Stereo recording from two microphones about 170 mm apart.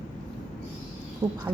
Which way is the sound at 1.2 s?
25° right (ahead or behind).